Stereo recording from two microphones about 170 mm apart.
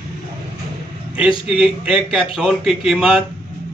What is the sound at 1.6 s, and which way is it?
A man's voice, 5° right (ahead or behind).